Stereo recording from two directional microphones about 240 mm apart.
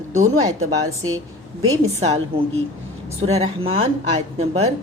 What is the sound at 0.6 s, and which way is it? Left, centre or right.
Speech, right.